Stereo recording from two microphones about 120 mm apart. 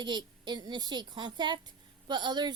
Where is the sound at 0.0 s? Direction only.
40° right (ahead or behind).